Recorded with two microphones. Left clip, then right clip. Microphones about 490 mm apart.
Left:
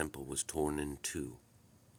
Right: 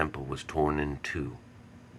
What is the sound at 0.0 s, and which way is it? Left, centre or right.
Speech, left.